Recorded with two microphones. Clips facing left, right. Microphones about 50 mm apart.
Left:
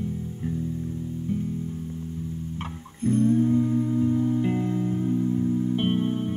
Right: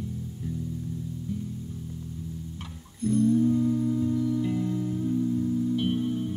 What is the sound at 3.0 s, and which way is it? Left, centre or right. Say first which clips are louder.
Music: left 1 dB; left.